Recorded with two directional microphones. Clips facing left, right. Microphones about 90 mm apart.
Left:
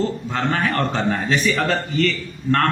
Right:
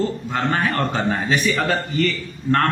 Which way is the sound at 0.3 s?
5° right (ahead or behind).